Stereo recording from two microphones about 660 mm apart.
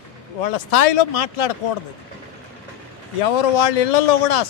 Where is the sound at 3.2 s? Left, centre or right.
Left.